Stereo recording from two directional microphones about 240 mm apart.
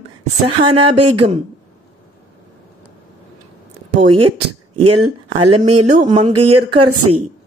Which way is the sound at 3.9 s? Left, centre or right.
Right.